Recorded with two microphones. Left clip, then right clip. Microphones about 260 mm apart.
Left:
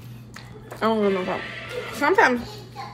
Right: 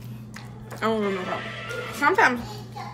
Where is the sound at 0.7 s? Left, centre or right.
Centre.